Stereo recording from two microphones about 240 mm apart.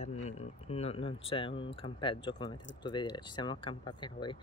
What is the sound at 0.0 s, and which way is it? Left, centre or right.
Speech, left.